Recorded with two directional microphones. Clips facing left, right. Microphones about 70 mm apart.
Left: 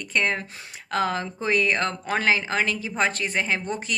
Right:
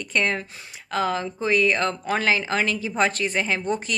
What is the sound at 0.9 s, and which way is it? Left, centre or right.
A woman's voice, left.